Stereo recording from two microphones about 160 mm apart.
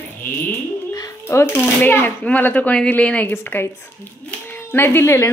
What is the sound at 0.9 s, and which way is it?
Speech, 20° left (ahead or behind).